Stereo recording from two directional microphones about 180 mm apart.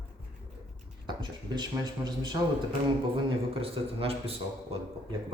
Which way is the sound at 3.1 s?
30° right (ahead or behind).